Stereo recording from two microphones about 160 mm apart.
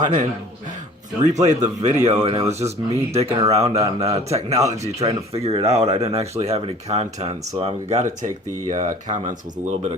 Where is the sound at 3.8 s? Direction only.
20° right (ahead or behind).